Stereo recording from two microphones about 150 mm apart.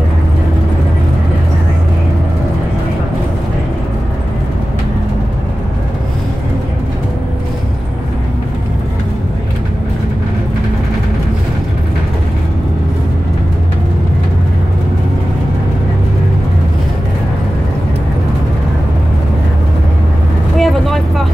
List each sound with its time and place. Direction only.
20.5 s vehicle: centre (ahead or behind)